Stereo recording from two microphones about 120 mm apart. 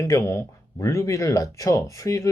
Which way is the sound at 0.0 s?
25° left (ahead or behind).